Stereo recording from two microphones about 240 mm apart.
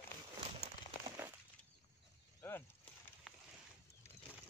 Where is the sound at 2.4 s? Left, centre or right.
Centre.